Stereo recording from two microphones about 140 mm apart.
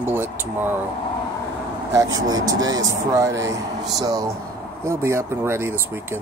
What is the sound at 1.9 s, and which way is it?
Speech, 25° right (ahead or behind).